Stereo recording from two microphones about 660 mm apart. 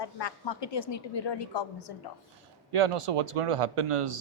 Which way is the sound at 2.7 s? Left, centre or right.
Right.